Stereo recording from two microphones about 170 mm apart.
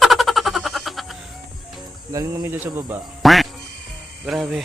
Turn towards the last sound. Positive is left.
turn(degrees=0)  # may be behind; listen again after turning